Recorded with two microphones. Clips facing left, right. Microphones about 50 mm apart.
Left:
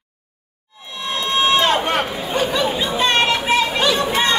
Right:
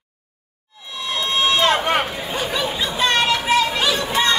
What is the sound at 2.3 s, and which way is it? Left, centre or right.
Chatter, centre.